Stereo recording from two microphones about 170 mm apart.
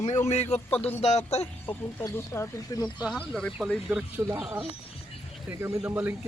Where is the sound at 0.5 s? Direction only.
35° left (ahead or behind).